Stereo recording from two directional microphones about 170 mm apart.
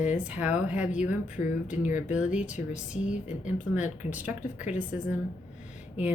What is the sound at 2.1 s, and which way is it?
Speech, 10° right (ahead or behind).